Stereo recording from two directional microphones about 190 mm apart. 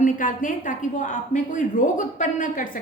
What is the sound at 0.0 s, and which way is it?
A woman's voice, 45° left (ahead or behind).